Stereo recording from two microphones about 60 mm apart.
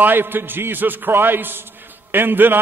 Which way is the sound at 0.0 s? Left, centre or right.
Right.